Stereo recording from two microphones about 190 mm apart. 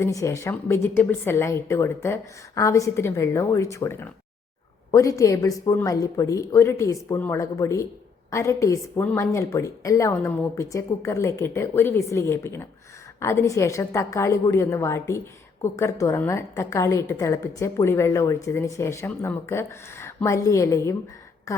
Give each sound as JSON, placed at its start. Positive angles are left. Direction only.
{"t": 0.0, "sound": "a woman's voice", "side_deg": 15}